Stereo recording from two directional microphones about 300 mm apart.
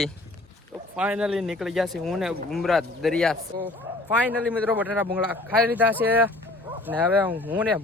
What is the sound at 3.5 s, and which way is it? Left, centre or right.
Speech, right.